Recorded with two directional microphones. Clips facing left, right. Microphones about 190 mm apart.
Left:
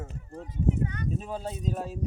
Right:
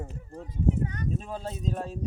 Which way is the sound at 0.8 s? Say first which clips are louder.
Even; 40° right (ahead or behind).